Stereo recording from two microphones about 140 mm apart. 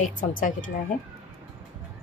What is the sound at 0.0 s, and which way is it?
Speech, 70° left (ahead or behind).